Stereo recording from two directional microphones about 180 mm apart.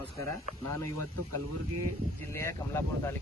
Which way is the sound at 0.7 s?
15° left (ahead or behind).